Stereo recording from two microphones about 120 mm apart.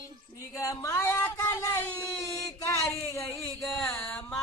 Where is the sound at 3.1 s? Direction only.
25° left (ahead or behind).